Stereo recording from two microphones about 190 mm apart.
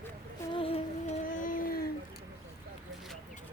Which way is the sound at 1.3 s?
45° left (ahead or behind).